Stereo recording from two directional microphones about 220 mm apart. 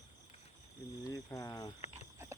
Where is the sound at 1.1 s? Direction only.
15° left (ahead or behind).